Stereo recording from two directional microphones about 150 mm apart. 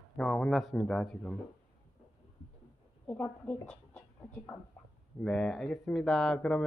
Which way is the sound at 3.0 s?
10° left (ahead or behind).